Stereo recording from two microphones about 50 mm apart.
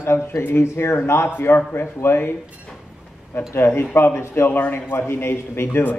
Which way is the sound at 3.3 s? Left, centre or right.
Left.